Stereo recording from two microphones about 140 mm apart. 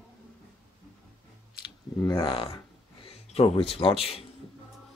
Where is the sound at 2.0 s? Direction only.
30° left (ahead or behind).